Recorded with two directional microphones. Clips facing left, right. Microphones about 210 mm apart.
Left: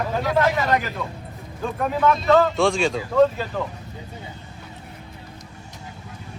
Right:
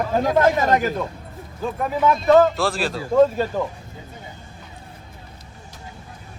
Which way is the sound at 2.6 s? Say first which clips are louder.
Left 3 dB; centre (ahead or behind).